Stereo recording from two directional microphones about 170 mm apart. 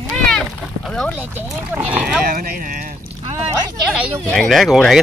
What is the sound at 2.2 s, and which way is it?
Speech, 60° right (ahead or behind).